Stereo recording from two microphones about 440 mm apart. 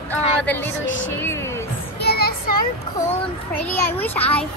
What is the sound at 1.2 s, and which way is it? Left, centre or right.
Music, centre.